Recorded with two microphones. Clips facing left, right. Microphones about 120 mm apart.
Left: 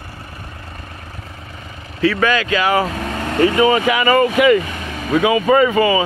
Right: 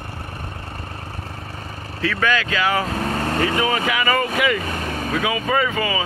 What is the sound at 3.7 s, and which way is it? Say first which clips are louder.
Speech: left 6 dB; 25° left (ahead or behind).